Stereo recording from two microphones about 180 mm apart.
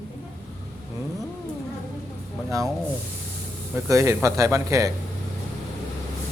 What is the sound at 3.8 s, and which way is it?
Speech, 15° right (ahead or behind).